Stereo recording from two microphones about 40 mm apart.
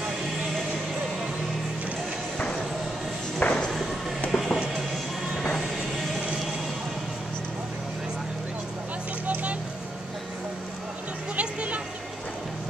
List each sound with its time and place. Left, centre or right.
3.4 s a sound: left
4.3 s music: centre
9.3 s vehicle: right
11.3 s music: right